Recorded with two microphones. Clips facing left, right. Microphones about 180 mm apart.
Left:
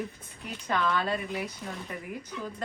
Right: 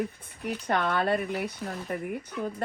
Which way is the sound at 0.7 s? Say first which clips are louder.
Right 2 dB; 55° right (ahead or behind).